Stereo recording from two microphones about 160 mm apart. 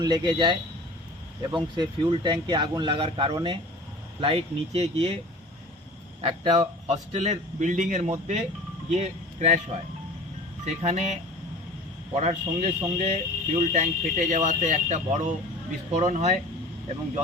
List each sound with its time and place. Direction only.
0.0 s speech: 25° right (ahead or behind)
1.7 s speech: 25° right (ahead or behind)
6.2 s speech: 30° right (ahead or behind)
6.8 s speech: 45° right (ahead or behind)
10.8 s speech: 45° right (ahead or behind)